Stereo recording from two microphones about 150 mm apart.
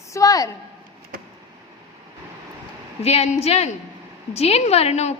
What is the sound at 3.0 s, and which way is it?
A woman's voice, 45° left (ahead or behind).